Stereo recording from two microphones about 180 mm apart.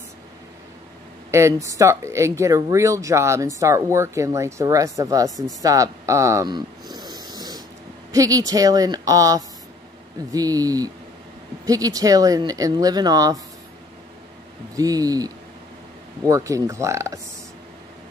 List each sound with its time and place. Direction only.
1.3 s speech: 15° right (ahead or behind)
14.8 s speech: 20° right (ahead or behind)